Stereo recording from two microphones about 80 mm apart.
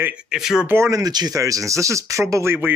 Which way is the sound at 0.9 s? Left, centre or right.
Right.